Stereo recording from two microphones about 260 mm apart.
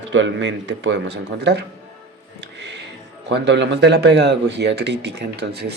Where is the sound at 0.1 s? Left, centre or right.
Right.